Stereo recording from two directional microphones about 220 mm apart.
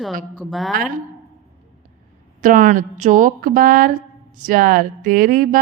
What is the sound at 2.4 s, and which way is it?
Speech, 40° right (ahead or behind).